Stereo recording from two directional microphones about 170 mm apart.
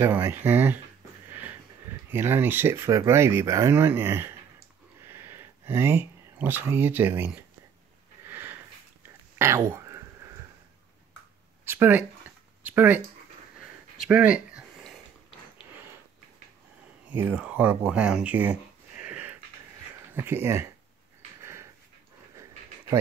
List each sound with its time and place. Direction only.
0.0 s speech: 10° right (ahead or behind)
1.3 s a sound: 10° right (ahead or behind)
2.0 s speech: 15° right (ahead or behind)
5.0 s a sound: 15° right (ahead or behind)
8.3 s sniff: 10° right (ahead or behind)
9.0 s whispering: 15° right (ahead or behind)
11.6 s speech: 15° right (ahead or behind)
13.6 s a sound: 5° right (ahead or behind)
15.7 s sniff: 10° right (ahead or behind)
17.1 s speech: 10° right (ahead or behind)
21.4 s dog: 15° right (ahead or behind)